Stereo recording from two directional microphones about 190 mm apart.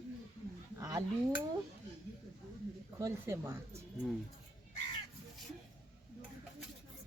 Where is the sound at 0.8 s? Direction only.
15° right (ahead or behind).